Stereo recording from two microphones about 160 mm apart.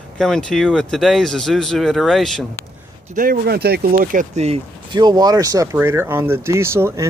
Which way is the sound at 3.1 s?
65° right (ahead or behind).